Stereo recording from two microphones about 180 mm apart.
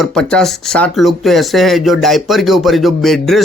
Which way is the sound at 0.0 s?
5° left (ahead or behind).